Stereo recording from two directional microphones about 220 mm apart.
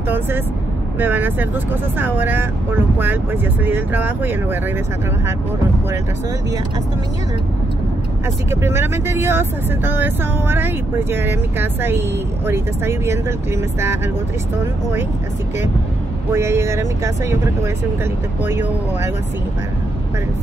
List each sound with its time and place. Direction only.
0.9 s speech: 10° right (ahead or behind)
8.5 s speech: 10° right (ahead or behind)
14.6 s speech: 10° right (ahead or behind)
16.3 s speech: 10° right (ahead or behind)